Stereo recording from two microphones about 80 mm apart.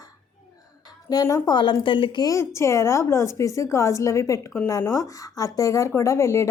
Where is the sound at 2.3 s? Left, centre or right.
Left.